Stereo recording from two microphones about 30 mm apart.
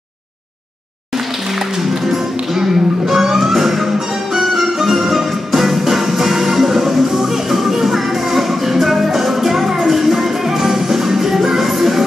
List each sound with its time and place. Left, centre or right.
1.8 s music: centre